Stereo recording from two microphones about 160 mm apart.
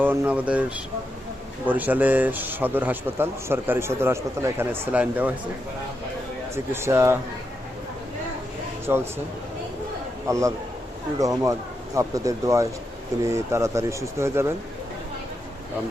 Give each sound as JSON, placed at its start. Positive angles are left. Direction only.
{"t": 0.0, "sound": "a man's voice", "side_deg": -10}
{"t": 1.6, "sound": "a man's voice", "side_deg": -10}
{"t": 6.5, "sound": "a man's voice", "side_deg": -15}
{"t": 8.9, "sound": "a man's voice", "side_deg": -20}
{"t": 10.2, "sound": "a man's voice", "side_deg": -20}